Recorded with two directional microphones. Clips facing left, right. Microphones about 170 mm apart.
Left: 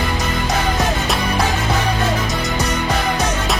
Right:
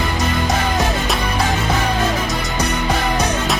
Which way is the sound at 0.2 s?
Centre (ahead or behind).